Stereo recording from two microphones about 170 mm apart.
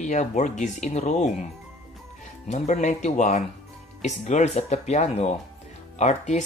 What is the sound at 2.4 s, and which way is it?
Speech, 45° left (ahead or behind).